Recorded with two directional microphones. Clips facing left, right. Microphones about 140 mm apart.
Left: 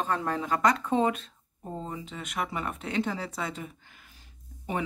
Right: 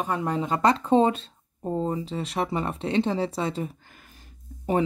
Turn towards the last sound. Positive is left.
turn(degrees=-45)  # may be behind; listen again after turning